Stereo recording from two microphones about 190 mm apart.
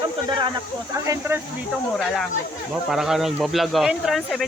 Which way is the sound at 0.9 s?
15° right (ahead or behind).